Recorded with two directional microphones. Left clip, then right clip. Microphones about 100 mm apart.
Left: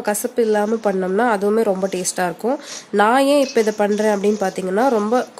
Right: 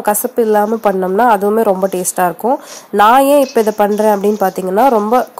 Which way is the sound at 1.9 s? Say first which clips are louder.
Right 5 dB; 30° right (ahead or behind).